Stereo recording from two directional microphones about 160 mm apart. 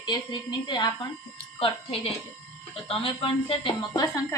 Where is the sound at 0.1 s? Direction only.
30° left (ahead or behind).